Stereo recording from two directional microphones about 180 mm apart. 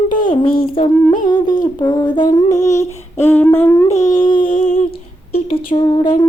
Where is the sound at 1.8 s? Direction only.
20° left (ahead or behind).